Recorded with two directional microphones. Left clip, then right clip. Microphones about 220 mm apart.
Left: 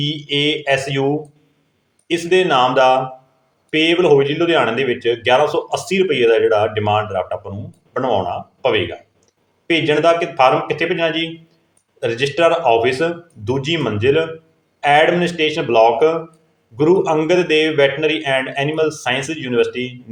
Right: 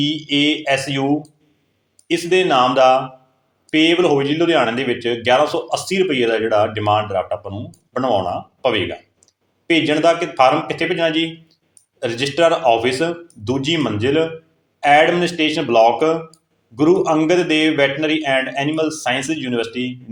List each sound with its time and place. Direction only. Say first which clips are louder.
0.0 s a man's voice: right 1 dB; 15° right (ahead or behind)
2.3 s a man's voice: left 1 dB; 15° right (ahead or behind)